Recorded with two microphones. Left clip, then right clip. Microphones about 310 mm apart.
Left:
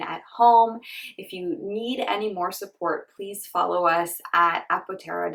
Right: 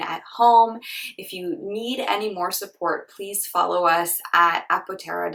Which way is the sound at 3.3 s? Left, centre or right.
Centre.